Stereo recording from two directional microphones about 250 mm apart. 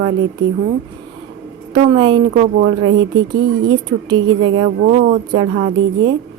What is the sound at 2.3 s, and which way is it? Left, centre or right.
Speech, right.